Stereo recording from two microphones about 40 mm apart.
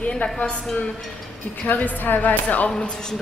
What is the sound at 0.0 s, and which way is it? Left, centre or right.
Speech, left.